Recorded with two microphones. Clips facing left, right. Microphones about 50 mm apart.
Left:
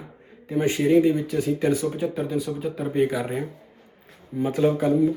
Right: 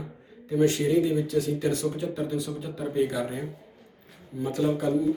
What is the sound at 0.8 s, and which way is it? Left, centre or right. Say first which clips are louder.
Speech: left 5 dB; left.